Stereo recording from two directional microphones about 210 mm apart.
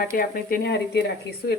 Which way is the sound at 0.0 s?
45° left (ahead or behind).